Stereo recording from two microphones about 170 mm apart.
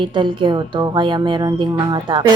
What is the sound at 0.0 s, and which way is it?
Speech, 30° right (ahead or behind).